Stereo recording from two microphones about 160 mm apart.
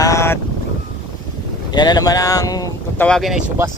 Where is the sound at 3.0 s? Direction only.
Centre (ahead or behind).